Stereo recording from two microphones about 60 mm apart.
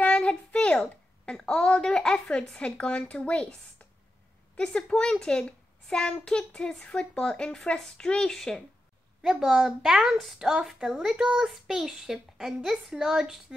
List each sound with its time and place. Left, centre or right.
0.0 s a sound: centre
0.7 s a woman's voice: centre
4.6 s a woman's voice: centre
9.2 s a woman's voice: centre